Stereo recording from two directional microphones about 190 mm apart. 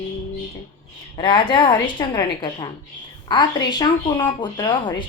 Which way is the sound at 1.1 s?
25° left (ahead or behind).